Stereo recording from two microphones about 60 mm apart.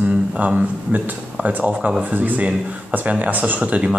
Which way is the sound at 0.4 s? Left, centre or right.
Right.